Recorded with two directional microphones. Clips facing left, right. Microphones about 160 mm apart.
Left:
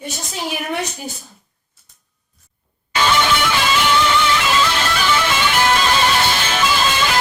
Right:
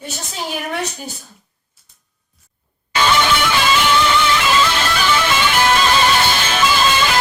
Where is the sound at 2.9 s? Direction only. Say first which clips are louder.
Right 1 dB; 90° right.